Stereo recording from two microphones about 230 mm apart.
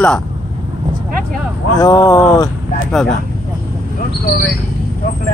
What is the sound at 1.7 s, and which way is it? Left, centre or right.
Speech, centre.